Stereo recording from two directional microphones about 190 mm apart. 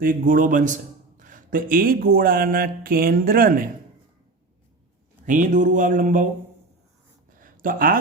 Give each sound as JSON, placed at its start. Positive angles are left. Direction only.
{"t": 0.0, "sound": "speech", "side_deg": -45}
{"t": 5.2, "sound": "speech", "side_deg": -45}
{"t": 7.3, "sound": "a sound", "side_deg": -45}